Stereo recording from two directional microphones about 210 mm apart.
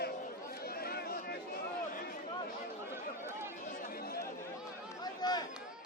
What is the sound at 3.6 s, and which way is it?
Chatter, 40° left (ahead or behind).